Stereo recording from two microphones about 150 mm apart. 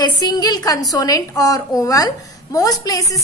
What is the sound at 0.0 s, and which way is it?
A woman's voice, 25° left (ahead or behind).